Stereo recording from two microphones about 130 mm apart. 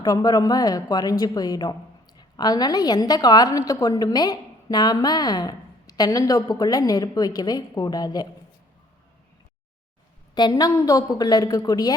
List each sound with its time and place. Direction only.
0.0 s a woman's voice: 30° left (ahead or behind)
10.3 s a woman's voice: 30° left (ahead or behind)